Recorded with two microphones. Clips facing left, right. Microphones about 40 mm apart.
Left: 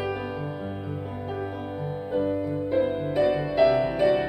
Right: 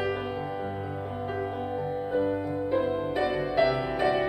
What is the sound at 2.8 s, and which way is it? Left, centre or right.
Music, left.